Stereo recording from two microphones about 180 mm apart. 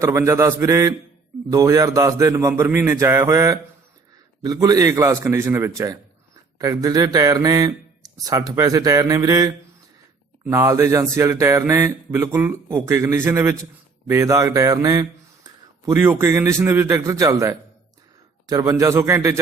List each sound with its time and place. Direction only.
0.0 s a man's voice: 15° right (ahead or behind)